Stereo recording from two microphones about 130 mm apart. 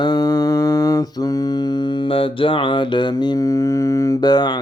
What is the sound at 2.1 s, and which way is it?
Mantra, 45° left (ahead or behind).